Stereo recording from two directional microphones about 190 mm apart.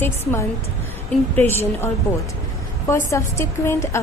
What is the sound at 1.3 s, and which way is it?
Speech, 10° left (ahead or behind).